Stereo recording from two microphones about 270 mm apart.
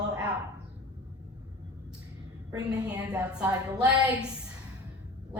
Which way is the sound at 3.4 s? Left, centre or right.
Centre.